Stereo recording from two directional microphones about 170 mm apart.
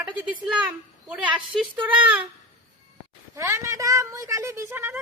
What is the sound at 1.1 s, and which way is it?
Speech, 5° right (ahead or behind).